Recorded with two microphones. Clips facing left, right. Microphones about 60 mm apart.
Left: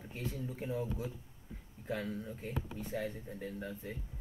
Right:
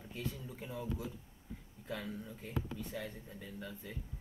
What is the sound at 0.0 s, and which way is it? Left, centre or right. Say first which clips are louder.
Speech: left 2 dB; left.